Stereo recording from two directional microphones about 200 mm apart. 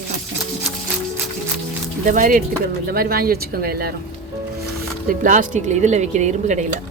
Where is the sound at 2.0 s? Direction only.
40° right (ahead or behind).